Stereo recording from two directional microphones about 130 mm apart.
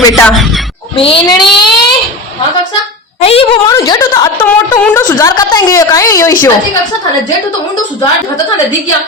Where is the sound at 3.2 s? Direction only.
50° left (ahead or behind).